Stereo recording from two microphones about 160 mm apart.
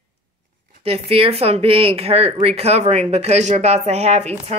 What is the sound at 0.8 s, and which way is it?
Speech, 40° right (ahead or behind).